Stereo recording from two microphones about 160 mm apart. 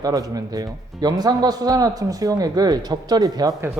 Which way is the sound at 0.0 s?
25° right (ahead or behind).